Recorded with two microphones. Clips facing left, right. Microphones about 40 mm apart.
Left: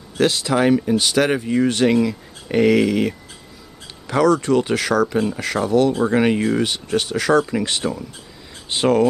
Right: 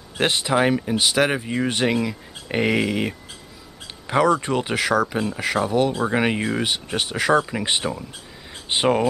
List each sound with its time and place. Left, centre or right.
0.2 s speech: right